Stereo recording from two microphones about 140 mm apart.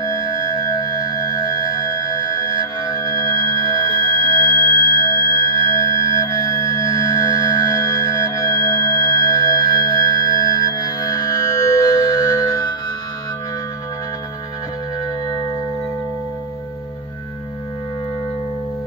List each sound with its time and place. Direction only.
0.0 s singing bowl: 25° left (ahead or behind)